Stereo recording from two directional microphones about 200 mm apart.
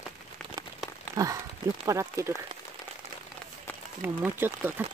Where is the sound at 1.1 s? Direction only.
15° right (ahead or behind).